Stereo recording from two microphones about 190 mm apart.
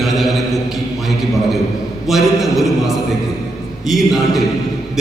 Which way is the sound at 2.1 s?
Centre (ahead or behind).